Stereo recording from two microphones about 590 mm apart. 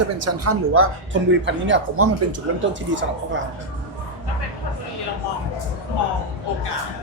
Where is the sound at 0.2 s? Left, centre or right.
Right.